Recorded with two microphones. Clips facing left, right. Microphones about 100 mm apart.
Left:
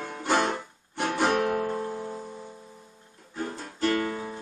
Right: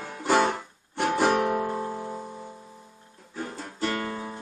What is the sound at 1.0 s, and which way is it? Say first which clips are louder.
Guitar: right 2 dB; 5° right (ahead or behind).